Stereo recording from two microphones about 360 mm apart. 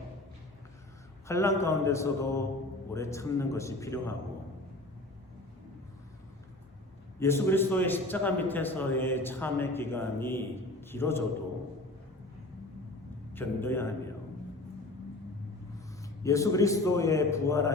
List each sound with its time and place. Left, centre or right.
1.3 s a man's voice: centre
7.2 s a man's voice: centre
13.3 s a man's voice: centre
16.2 s a man's voice: centre